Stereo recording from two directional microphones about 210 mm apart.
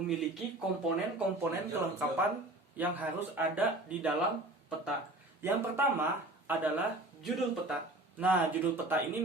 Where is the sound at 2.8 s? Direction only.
10° right (ahead or behind).